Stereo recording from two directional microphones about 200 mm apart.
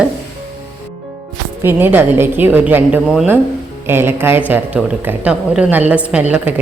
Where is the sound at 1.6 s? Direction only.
10° right (ahead or behind).